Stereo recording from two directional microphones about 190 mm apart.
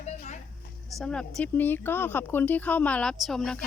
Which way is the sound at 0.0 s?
35° left (ahead or behind).